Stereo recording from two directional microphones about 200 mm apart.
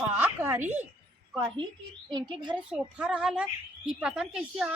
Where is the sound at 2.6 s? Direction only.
5° right (ahead or behind).